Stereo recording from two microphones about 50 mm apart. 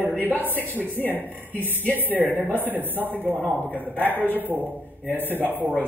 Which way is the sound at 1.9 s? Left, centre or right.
Right.